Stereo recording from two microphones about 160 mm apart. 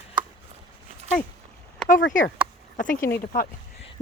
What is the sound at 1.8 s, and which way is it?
Speech, 55° left (ahead or behind).